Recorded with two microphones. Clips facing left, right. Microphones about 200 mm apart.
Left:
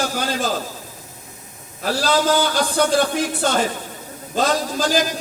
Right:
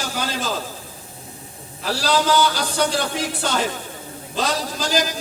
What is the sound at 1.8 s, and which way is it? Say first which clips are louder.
Music: left 2 dB; 50° left (ahead or behind).